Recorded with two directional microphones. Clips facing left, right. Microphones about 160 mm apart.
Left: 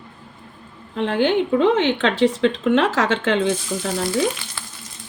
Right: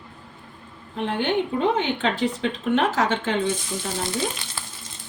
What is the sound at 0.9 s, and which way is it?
A woman's voice, 90° left.